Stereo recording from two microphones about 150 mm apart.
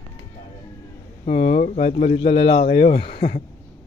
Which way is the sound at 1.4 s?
55° left (ahead or behind).